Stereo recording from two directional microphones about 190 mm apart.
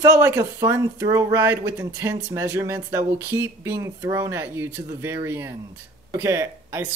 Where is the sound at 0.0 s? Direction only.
15° right (ahead or behind).